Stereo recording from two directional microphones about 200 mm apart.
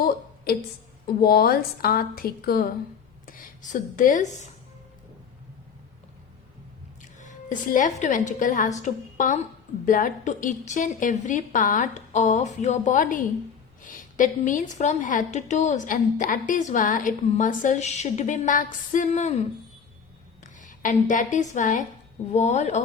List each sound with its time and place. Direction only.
0.5 s a woman's voice: 50° left (ahead or behind)
7.2 s a woman's voice: 40° left (ahead or behind)
20.4 s a woman's voice: 40° left (ahead or behind)